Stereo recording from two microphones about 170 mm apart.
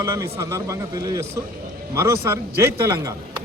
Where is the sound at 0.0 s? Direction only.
15° right (ahead or behind).